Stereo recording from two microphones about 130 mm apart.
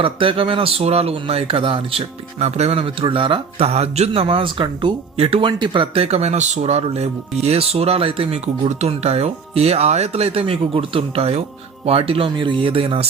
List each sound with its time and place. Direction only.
0.0 s speech: 45° right (ahead or behind)